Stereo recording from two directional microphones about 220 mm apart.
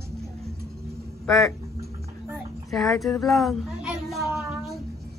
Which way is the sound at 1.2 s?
Centre (ahead or behind).